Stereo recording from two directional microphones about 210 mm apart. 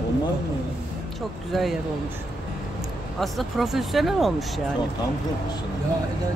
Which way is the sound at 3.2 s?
Centre (ahead or behind).